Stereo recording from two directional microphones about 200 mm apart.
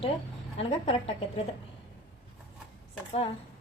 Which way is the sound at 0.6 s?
30° left (ahead or behind).